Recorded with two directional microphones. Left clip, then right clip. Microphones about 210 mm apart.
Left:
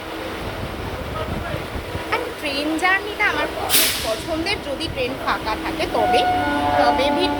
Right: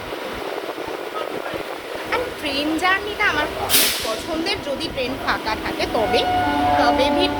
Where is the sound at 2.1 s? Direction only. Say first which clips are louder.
Right 1 dB; 15° right (ahead or behind).